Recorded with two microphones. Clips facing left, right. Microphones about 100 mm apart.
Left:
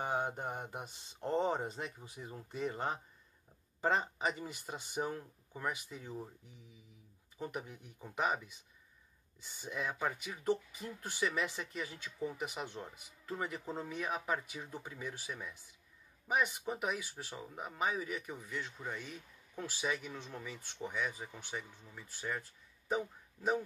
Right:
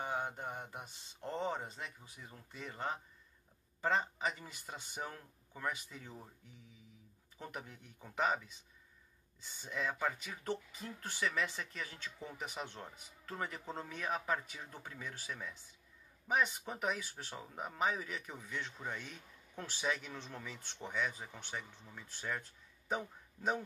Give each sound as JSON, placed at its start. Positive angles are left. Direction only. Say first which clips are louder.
{"t": 0.1, "sound": "speech", "louder": "left 3 dB", "side_deg": 20}
{"t": 7.3, "sound": "speech", "louder": "left 5 dB", "side_deg": 10}